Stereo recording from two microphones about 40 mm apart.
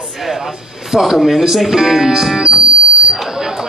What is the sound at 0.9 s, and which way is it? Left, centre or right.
Speech, centre.